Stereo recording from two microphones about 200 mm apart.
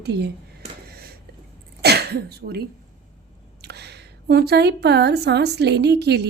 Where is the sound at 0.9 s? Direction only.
50° right (ahead or behind).